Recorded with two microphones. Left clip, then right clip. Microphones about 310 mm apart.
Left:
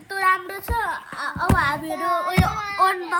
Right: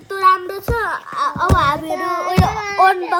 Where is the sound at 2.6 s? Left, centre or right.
Right.